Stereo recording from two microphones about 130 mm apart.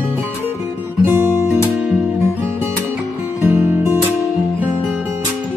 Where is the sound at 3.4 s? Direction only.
15° right (ahead or behind).